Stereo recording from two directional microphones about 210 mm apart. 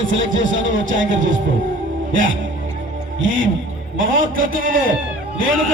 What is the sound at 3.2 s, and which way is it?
Speech, 65° right (ahead or behind).